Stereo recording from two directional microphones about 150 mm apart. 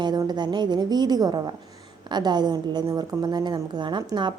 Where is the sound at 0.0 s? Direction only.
30° right (ahead or behind).